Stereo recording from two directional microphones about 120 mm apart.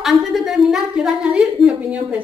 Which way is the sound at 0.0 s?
Centre (ahead or behind).